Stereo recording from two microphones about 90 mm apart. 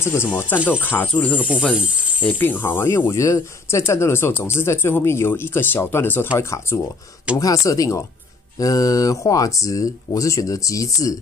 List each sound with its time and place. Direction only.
0.0 s speech: 25° left (ahead or behind)
1.3 s speech: 10° right (ahead or behind)
2.2 s speech: 20° left (ahead or behind); by 11.1 s 40° left (ahead or behind)